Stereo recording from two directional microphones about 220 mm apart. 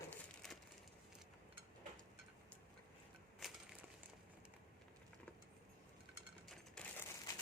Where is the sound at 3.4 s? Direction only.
Centre (ahead or behind).